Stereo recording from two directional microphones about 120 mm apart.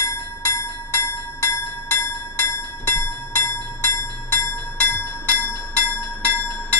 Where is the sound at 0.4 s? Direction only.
20° left (ahead or behind).